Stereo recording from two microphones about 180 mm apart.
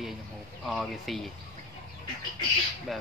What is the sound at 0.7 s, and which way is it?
Speech, centre (ahead or behind).